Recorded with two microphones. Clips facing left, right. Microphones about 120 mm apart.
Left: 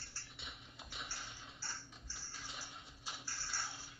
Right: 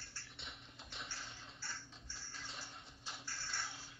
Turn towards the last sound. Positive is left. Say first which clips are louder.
# even
turn(degrees=30)  # may be behind; listen again after turning